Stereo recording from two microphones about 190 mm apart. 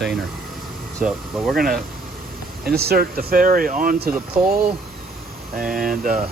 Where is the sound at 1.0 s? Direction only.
5° right (ahead or behind).